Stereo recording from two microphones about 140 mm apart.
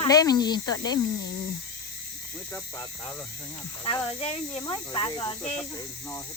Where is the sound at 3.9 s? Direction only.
40° left (ahead or behind).